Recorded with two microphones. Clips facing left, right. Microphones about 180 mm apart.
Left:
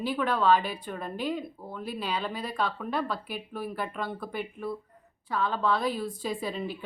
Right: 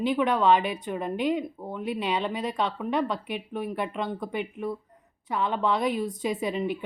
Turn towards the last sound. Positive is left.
turn(degrees=-20)  # may be behind; listen again after turning